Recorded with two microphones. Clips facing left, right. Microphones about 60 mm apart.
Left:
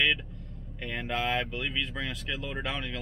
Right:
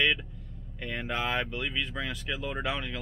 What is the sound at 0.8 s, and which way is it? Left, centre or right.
Speech, centre.